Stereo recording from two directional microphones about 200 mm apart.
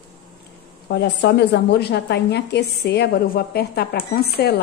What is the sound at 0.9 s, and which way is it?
A woman's voice, 60° left (ahead or behind).